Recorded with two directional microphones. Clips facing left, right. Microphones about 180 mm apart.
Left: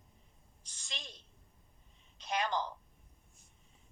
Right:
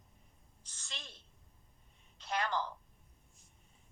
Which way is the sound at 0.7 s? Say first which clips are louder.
Left 2 dB; 15° left (ahead or behind).